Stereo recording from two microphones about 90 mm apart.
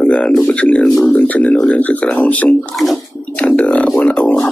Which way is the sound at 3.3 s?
15° left (ahead or behind).